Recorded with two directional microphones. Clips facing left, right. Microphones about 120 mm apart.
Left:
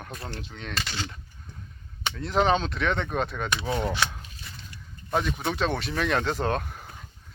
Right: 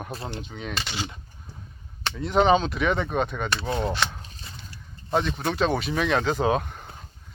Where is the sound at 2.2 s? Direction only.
Centre (ahead or behind).